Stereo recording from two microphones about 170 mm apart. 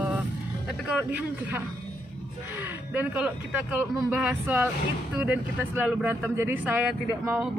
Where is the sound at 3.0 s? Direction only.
5° right (ahead or behind).